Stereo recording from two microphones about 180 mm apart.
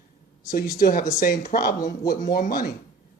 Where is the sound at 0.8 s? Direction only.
50° left (ahead or behind).